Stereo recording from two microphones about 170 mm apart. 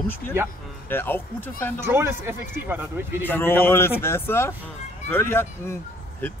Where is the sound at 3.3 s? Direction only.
15° left (ahead or behind).